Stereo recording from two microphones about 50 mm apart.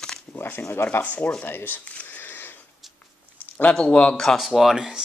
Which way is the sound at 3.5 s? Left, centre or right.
Left.